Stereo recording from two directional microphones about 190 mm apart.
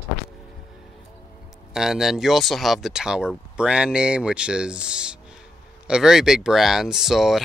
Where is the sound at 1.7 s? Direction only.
Centre (ahead or behind).